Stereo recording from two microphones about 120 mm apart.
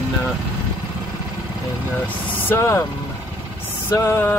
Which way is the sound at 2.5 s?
25° left (ahead or behind).